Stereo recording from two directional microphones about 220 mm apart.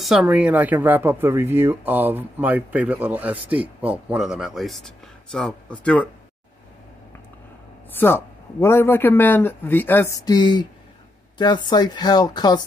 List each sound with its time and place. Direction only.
0.0 s speech: centre (ahead or behind)
7.9 s a man's voice: 10° left (ahead or behind)